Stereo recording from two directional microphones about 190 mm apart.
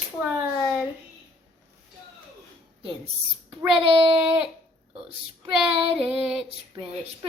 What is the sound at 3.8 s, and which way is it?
Speech, 30° right (ahead or behind).